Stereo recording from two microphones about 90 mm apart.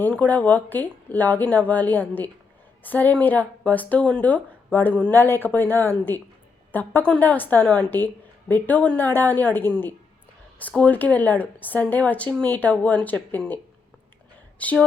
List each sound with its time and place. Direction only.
0.1 s a woman's voice: 15° left (ahead or behind)
14.6 s speech: 15° left (ahead or behind)